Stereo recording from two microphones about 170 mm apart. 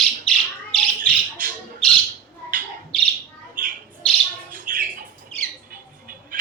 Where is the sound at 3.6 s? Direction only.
55° right (ahead or behind).